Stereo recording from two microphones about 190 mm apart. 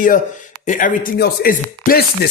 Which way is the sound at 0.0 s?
45° left (ahead or behind).